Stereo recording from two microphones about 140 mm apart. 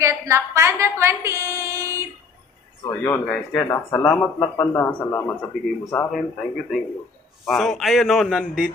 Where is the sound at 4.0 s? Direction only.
10° left (ahead or behind).